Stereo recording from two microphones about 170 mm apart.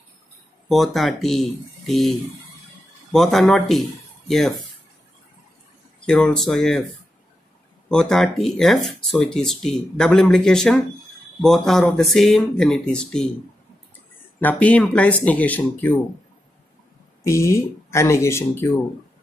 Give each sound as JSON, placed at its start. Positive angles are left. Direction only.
{"t": 0.7, "sound": "speech", "side_deg": 0}
{"t": 6.0, "sound": "speech", "side_deg": 5}
{"t": 7.9, "sound": "speech", "side_deg": 0}
{"t": 14.4, "sound": "speech", "side_deg": 10}
{"t": 17.2, "sound": "speech", "side_deg": 15}